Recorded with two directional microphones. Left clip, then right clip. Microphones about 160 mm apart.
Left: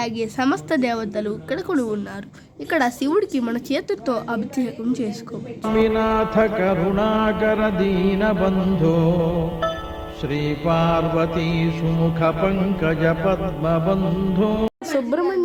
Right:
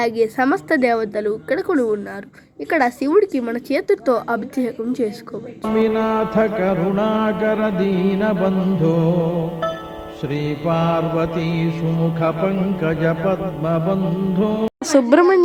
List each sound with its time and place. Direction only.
0.0 s a woman's voice: 20° right (ahead or behind)
5.6 s mantra: 30° right (ahead or behind)